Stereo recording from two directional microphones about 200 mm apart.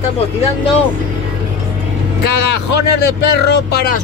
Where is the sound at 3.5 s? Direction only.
55° left (ahead or behind).